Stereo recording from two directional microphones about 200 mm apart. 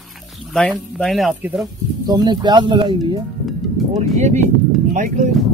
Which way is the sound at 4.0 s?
35° right (ahead or behind).